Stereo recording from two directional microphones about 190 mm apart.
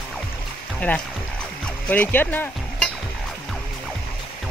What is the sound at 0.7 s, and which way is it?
Speech, 5° left (ahead or behind).